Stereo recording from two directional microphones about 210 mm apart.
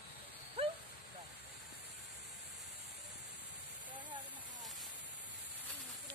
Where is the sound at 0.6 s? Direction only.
25° right (ahead or behind).